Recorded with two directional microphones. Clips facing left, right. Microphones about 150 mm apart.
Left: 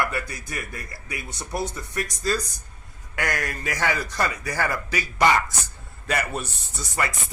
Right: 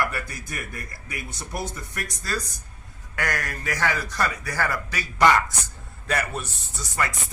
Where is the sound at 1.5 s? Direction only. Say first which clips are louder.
Left 4 dB; 25° left (ahead or behind).